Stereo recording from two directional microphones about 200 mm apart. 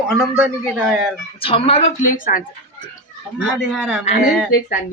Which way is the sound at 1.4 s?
25° left (ahead or behind).